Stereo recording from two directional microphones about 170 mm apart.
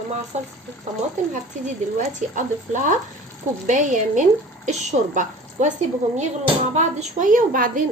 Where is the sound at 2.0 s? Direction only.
45° right (ahead or behind).